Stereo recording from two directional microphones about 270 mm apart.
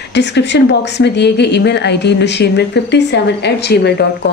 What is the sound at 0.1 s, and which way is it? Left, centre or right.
Speech, left.